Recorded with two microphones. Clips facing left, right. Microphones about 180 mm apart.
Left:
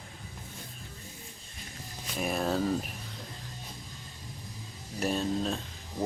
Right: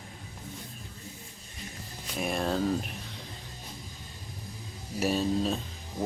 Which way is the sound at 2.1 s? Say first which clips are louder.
Even; centre (ahead or behind).